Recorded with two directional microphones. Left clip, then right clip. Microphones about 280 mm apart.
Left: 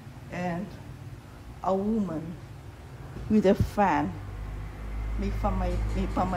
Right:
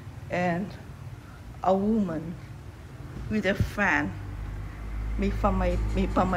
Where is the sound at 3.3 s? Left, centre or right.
Centre.